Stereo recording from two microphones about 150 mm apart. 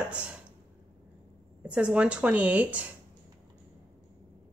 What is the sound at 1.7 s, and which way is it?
A woman's voice, 10° right (ahead or behind).